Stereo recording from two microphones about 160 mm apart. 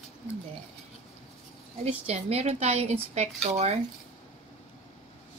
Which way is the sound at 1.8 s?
40° right (ahead or behind).